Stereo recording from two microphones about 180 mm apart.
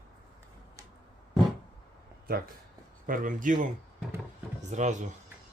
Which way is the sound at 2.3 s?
55° right (ahead or behind).